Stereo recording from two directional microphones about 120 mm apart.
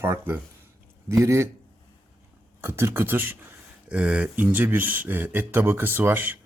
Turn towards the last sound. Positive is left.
turn(degrees=-15)  # may be behind; listen again after turning